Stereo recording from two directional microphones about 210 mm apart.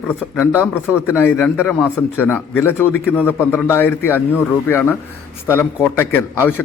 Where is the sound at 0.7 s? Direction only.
10° left (ahead or behind).